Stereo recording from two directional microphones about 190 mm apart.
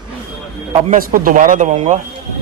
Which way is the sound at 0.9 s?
50° right (ahead or behind).